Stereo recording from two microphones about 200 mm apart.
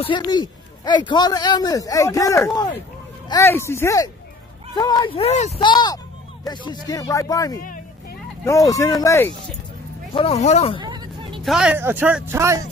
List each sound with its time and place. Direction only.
0.0 s a man's voice: 20° left (ahead or behind)
5.6 s a man's voice: 20° left (ahead or behind)
10.1 s a man's voice: 30° left (ahead or behind)
10.8 s hubbub: 20° right (ahead or behind)
11.4 s speech: 5° right (ahead or behind)